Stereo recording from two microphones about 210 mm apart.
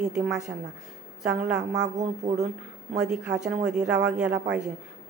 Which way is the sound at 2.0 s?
35° right (ahead or behind).